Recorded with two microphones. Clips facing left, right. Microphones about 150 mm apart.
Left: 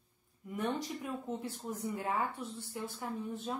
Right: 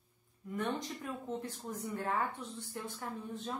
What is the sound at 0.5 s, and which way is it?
A woman's voice, 10° left (ahead or behind).